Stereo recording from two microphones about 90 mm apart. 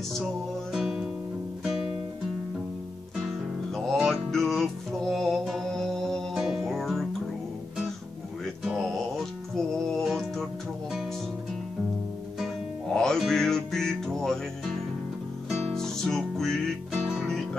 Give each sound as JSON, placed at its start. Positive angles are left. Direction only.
{"t": 0.7, "sound": "music", "side_deg": -5}
{"t": 3.2, "sound": "music", "side_deg": 0}
{"t": 8.6, "sound": "music", "side_deg": 0}
{"t": 12.9, "sound": "music", "side_deg": 5}